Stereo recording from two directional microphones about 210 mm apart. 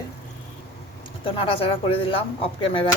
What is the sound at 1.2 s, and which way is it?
Speech, 25° left (ahead or behind).